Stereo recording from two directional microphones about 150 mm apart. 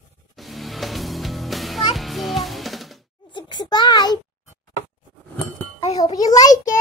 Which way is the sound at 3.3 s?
30° left (ahead or behind).